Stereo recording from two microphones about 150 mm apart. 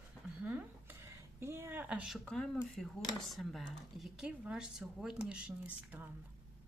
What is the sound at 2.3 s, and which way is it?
Speech, 5° left (ahead or behind).